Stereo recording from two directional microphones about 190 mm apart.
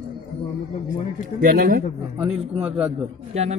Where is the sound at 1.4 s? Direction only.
45° right (ahead or behind).